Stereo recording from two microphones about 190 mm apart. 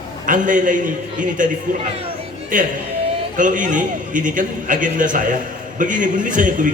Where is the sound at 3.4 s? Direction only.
45° right (ahead or behind).